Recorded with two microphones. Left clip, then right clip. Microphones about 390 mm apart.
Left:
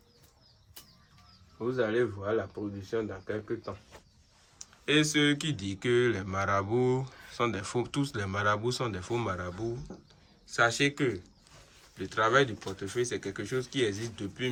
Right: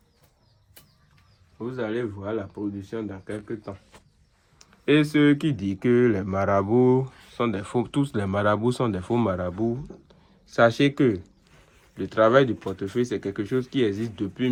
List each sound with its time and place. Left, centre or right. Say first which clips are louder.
1.7 s speech: even; right
4.5 s speech: right 6 dB; centre